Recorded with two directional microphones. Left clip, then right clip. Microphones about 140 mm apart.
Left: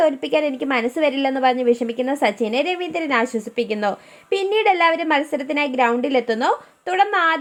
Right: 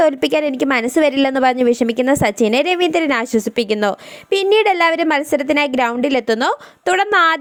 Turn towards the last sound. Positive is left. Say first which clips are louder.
# right 4 dB
turn(degrees=-55)  # may be behind; listen again after turning